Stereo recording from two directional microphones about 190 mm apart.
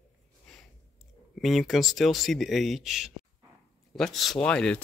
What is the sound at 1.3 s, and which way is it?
Speech, centre (ahead or behind).